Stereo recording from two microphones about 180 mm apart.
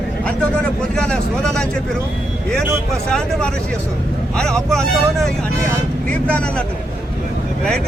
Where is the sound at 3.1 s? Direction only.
5° left (ahead or behind).